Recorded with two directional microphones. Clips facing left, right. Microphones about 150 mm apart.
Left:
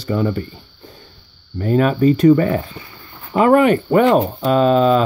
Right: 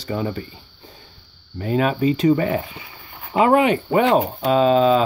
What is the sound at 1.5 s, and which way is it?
Speech, 45° left (ahead or behind).